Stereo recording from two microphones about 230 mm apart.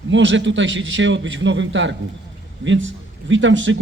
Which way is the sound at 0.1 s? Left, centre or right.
Right.